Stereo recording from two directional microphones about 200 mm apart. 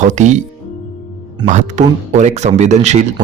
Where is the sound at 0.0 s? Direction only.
35° right (ahead or behind).